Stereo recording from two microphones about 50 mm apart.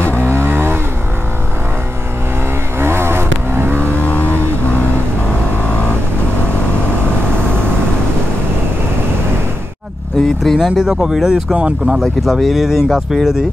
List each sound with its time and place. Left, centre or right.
0.0 s vehicle: left
0.3 s vehicle: right
2.8 s vehicle: right
3.8 s vehicle: left
10.1 s vehicle: centre
10.6 s speech: centre